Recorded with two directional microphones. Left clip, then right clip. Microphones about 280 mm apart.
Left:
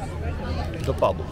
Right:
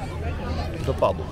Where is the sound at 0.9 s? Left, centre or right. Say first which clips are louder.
Even; centre.